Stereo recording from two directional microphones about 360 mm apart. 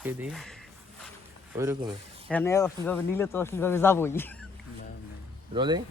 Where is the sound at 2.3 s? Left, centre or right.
Centre.